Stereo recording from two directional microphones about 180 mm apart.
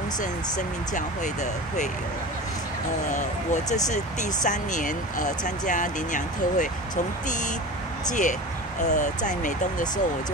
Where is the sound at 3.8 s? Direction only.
45° left (ahead or behind).